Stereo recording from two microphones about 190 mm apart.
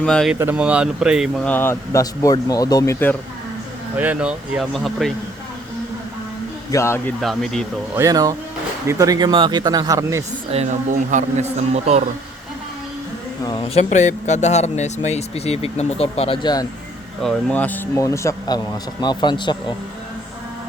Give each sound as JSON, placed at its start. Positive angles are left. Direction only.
{"t": 0.0, "sound": "speech", "side_deg": 5}
{"t": 0.3, "sound": "speech", "side_deg": -10}
{"t": 3.9, "sound": "speech", "side_deg": -10}
{"t": 6.7, "sound": "speech", "side_deg": 15}
{"t": 7.2, "sound": "speech", "side_deg": 0}
{"t": 7.9, "sound": "speech", "side_deg": -20}
{"t": 10.5, "sound": "a man's voice", "side_deg": -35}
{"t": 13.4, "sound": "speech", "side_deg": 20}
{"t": 13.7, "sound": "speech", "side_deg": 35}
{"t": 17.2, "sound": "speech", "side_deg": 10}